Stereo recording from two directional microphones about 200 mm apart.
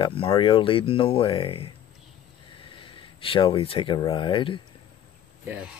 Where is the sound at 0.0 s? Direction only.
25° left (ahead or behind).